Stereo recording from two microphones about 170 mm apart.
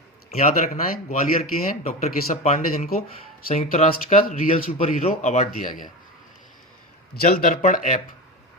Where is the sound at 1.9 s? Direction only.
50° left (ahead or behind).